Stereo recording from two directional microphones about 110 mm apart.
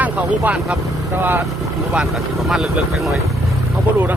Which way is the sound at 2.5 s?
Centre (ahead or behind).